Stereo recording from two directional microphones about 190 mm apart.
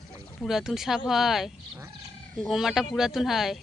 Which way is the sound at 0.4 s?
Centre (ahead or behind).